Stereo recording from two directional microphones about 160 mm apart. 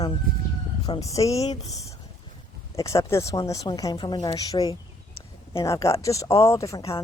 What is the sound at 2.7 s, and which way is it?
Speech, 20° left (ahead or behind).